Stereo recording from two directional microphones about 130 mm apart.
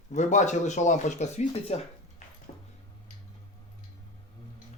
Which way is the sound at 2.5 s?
55° left (ahead or behind).